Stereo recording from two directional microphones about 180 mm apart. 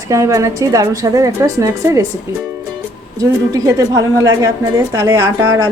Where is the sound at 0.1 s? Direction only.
15° right (ahead or behind).